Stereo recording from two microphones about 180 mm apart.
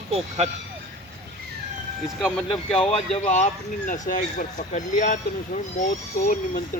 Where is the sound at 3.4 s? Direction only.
45° left (ahead or behind).